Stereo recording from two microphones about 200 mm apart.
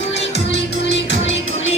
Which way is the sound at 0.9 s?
65° left (ahead or behind).